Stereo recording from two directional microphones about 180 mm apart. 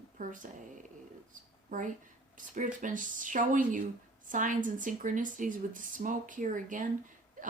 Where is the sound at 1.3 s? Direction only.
45° right (ahead or behind).